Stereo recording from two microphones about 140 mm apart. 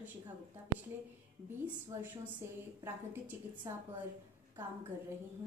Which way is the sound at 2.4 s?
20° right (ahead or behind).